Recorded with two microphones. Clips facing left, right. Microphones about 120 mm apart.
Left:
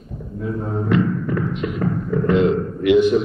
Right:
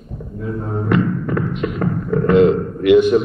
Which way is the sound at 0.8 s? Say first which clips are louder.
Right 1 dB; 60° right (ahead or behind).